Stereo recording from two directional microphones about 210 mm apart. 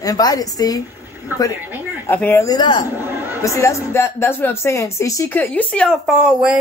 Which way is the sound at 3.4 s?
15° left (ahead or behind).